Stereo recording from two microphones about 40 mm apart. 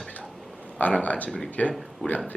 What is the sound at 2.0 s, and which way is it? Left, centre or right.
Speech, centre.